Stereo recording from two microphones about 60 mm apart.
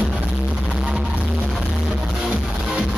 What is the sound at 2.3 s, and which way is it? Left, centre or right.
Music, centre.